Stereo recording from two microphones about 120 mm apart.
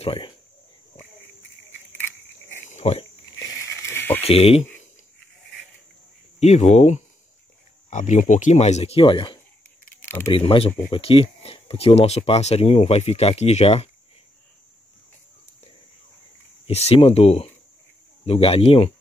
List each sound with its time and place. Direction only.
0.0 s speech: 50° left (ahead or behind)
2.7 s a sound: 65° left (ahead or behind)
3.6 s a sound: 20° left (ahead or behind)
4.2 s speech: 55° left (ahead or behind)
6.4 s speech: 75° left (ahead or behind)
7.9 s speech: 90° left; by 13.8 s 60° left (ahead or behind)
16.6 s speech: 55° left (ahead or behind)